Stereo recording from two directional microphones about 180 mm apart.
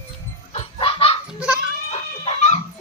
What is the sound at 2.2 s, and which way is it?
Dog, 40° left (ahead or behind).